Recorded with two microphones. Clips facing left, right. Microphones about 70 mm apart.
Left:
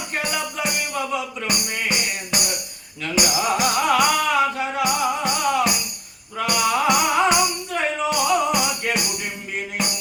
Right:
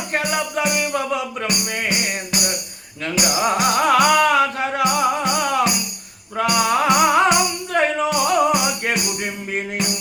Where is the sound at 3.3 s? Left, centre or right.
Right.